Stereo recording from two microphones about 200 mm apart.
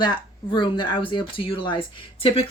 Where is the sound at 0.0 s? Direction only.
20° left (ahead or behind).